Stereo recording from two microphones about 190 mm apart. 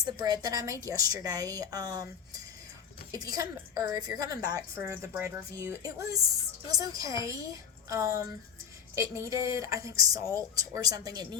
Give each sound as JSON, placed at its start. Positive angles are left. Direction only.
{"t": 0.0, "sound": "a woman's voice", "side_deg": -20}